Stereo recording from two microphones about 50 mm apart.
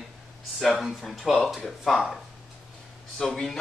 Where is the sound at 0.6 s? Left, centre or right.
Centre.